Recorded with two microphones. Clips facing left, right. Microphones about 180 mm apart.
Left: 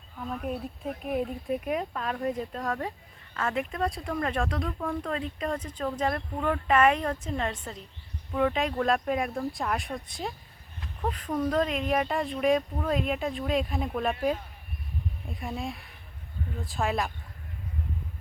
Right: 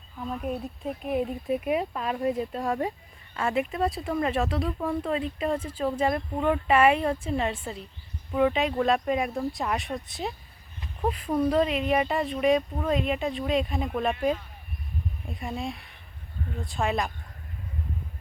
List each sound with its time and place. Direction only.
1.0 s speech: centre (ahead or behind)